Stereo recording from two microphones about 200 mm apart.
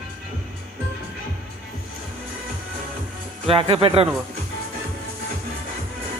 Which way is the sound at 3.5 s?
25° right (ahead or behind).